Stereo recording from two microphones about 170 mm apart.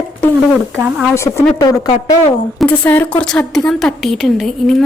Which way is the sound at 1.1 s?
15° left (ahead or behind).